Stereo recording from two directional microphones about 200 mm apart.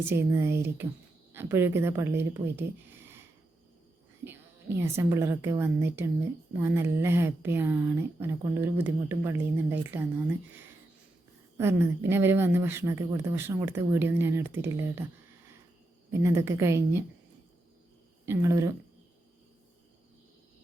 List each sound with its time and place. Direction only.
0.0 s speech: 10° right (ahead or behind)
4.2 s a woman's voice: 10° right (ahead or behind)
16.1 s speech: 15° right (ahead or behind)
18.3 s speech: 15° right (ahead or behind)